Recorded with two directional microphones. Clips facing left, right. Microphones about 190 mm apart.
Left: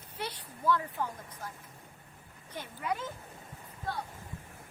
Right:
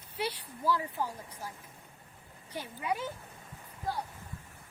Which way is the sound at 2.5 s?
10° right (ahead or behind).